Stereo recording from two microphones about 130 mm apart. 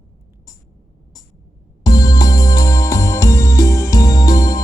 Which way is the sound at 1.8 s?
30° left (ahead or behind).